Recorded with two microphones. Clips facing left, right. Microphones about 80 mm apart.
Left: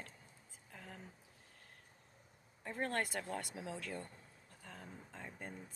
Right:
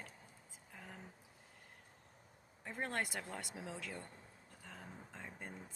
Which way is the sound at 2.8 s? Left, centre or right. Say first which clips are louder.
Left 2 dB; centre.